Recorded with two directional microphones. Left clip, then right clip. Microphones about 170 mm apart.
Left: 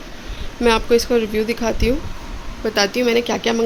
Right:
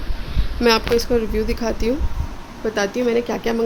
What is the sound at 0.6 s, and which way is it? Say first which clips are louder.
Speech: left 1 dB; centre (ahead or behind).